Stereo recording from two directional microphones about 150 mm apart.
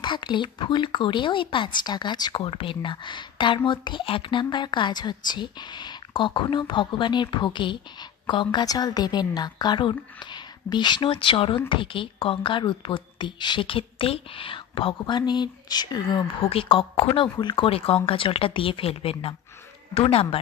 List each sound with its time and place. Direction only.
0.0 s a woman's voice: 30° left (ahead or behind)